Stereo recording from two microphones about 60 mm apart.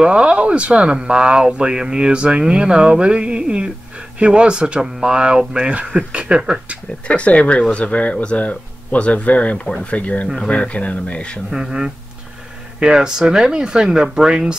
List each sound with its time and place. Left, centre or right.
0.0 s speech: centre
7.1 s speech: left
9.7 s speech: centre
9.9 s speech: left
10.2 s speech: centre
10.5 s speech: left
11.5 s speech: centre